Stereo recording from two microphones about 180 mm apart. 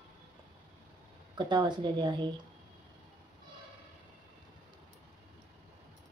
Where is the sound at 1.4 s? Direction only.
25° right (ahead or behind).